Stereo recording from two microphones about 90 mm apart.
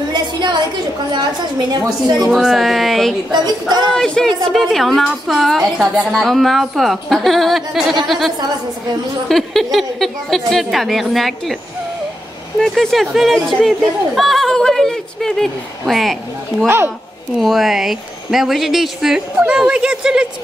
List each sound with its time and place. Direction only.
0.1 s a sound: 55° right (ahead or behind)
1.1 s a woman's voice: 55° right (ahead or behind)
2.2 s speech: centre (ahead or behind)
3.3 s a woman's voice: 50° right (ahead or behind)
3.9 s speech: 5° left (ahead or behind)
9.3 s speech: centre (ahead or behind)
12.5 s speech: 5° left (ahead or behind)
16.6 s speech: 25° right (ahead or behind)
17.4 s speech: centre (ahead or behind)